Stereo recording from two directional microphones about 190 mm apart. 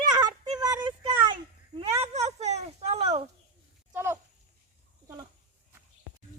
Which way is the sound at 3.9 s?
10° right (ahead or behind).